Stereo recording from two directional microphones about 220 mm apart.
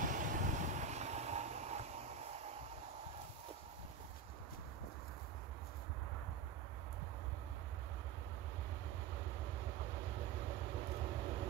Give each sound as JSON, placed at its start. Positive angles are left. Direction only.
{"t": 0.0, "sound": "vehicle", "side_deg": -35}